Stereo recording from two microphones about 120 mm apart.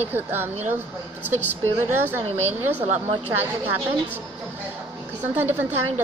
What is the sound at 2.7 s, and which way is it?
Speech, 65° right (ahead or behind).